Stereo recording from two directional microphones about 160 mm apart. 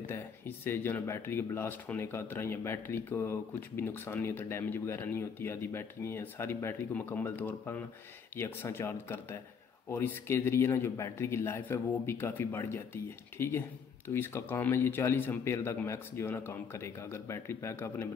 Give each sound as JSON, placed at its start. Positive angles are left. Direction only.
{"t": 0.0, "sound": "a man's voice", "side_deg": 15}